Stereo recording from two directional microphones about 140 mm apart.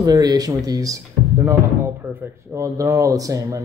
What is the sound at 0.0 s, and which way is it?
Speech, 25° right (ahead or behind).